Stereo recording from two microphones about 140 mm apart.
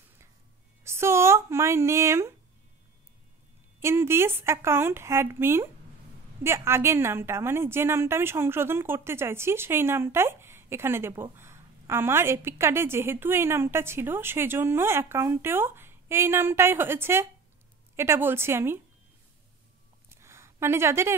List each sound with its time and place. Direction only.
0.8 s speech: 20° right (ahead or behind)
3.8 s a woman's voice: 20° right (ahead or behind)
20.1 s a sound: 20° right (ahead or behind)